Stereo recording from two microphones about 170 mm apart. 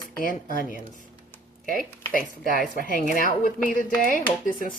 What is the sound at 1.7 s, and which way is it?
Speech, 55° left (ahead or behind).